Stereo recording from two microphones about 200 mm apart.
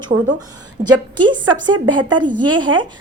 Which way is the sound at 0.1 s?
45° right (ahead or behind).